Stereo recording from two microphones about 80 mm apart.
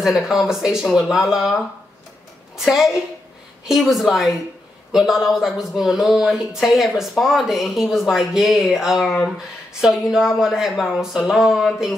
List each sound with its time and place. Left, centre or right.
0.0 s a woman's voice: centre